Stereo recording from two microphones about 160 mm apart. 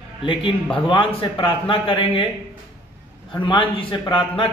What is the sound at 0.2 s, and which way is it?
A man's voice, 30° left (ahead or behind).